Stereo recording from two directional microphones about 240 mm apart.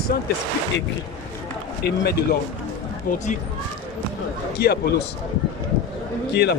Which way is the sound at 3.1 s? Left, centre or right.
Left.